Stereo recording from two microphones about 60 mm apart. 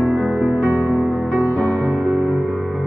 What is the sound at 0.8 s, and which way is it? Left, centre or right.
Music, right.